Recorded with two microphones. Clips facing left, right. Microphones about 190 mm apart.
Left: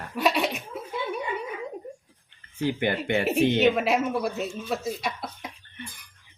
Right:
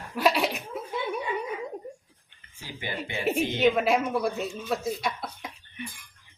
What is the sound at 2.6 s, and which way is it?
Speech, 60° left (ahead or behind).